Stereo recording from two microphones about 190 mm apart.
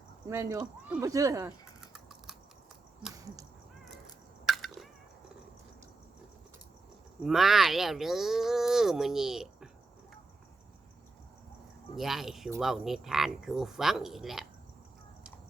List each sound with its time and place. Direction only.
0.3 s speech: 20° right (ahead or behind)
1.9 s computer keyboard: centre (ahead or behind)
3.2 s a sound: 20° right (ahead or behind)
4.4 s a sound: centre (ahead or behind)
7.3 s speech: centre (ahead or behind)
11.9 s speech: centre (ahead or behind)